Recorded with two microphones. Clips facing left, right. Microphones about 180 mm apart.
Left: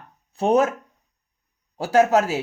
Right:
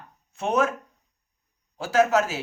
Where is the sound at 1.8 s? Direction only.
35° left (ahead or behind).